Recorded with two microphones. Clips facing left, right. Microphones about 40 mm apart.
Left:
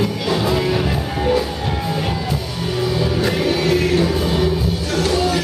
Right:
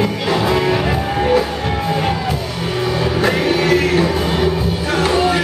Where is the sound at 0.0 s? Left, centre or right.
Right.